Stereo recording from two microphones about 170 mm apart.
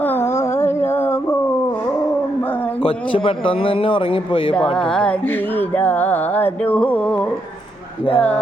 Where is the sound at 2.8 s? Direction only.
30° left (ahead or behind).